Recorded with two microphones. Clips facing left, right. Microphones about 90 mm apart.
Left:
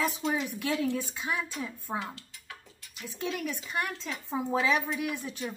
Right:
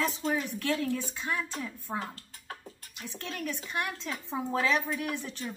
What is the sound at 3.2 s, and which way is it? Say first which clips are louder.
Speech: left 3 dB; 10° left (ahead or behind).